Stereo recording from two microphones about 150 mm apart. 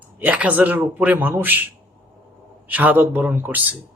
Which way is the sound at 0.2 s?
10° right (ahead or behind).